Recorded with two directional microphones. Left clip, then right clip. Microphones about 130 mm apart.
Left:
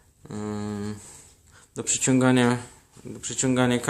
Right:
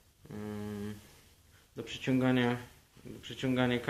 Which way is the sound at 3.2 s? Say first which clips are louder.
Left 8 dB; 45° left (ahead or behind).